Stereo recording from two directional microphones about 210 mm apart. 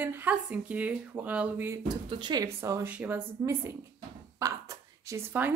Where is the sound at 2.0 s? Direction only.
20° right (ahead or behind).